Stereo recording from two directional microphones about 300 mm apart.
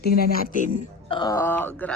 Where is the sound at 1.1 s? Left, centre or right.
Centre.